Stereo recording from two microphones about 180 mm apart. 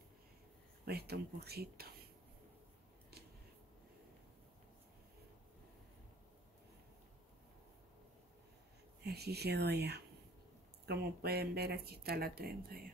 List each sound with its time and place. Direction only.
0.8 s speech: 60° right (ahead or behind)
9.0 s speech: 65° right (ahead or behind)